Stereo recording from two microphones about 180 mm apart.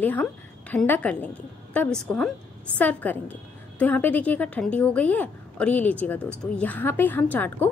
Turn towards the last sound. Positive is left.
turn(degrees=10)  # may be behind; listen again after turning